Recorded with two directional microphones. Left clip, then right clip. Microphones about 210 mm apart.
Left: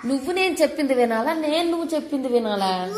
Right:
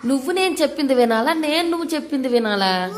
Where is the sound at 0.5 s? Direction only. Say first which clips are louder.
Right 2 dB; 20° right (ahead or behind).